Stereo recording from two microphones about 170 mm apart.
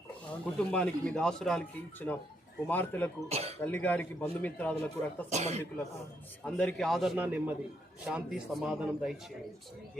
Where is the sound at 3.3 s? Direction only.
35° right (ahead or behind).